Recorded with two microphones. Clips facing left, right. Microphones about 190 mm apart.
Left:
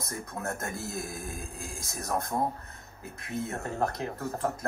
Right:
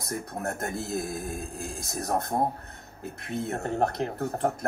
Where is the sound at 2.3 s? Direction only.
35° right (ahead or behind).